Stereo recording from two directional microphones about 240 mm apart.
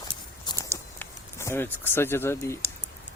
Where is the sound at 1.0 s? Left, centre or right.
Centre.